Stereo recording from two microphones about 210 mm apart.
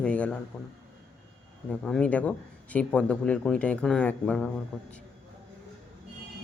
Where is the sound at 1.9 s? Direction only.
5° left (ahead or behind).